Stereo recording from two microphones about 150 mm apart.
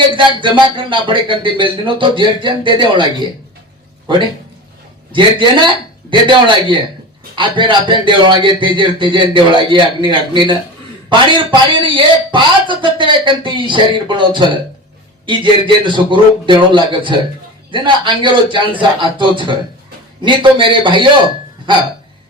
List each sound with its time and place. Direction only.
0.1 s speech: 35° right (ahead or behind)
5.1 s speech: 30° right (ahead or behind)
11.7 s a man's voice: 35° right (ahead or behind)